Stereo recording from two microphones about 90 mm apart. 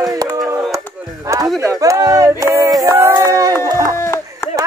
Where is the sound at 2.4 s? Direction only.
35° right (ahead or behind).